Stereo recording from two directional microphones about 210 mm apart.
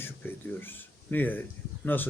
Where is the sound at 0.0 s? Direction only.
10° left (ahead or behind).